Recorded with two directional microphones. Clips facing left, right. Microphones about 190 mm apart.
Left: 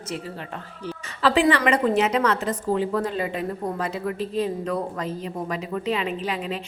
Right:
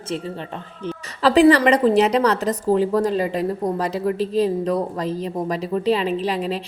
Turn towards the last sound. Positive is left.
turn(degrees=-35)  # may be behind; listen again after turning